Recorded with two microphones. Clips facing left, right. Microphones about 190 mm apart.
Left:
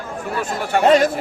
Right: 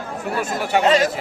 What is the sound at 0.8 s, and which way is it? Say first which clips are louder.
Speech: left 4 dB; 55° left (ahead or behind).